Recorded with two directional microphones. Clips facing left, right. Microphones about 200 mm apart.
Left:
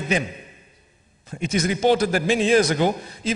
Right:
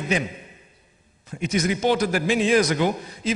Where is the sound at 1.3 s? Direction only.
30° left (ahead or behind).